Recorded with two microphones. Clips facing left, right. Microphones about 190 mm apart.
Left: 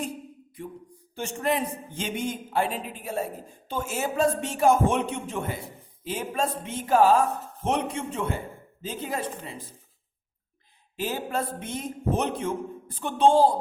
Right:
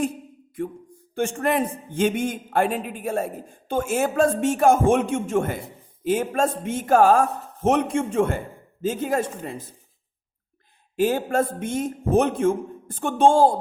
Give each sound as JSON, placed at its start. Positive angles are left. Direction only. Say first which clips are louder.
{"t": 1.1, "sound": "a man's voice", "louder": "right 5 dB", "side_deg": -50}
{"t": 10.9, "sound": "a man's voice", "louder": "right 8 dB", "side_deg": -50}